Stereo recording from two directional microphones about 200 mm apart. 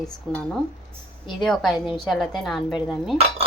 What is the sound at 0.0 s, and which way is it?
A woman's voice, 5° left (ahead or behind).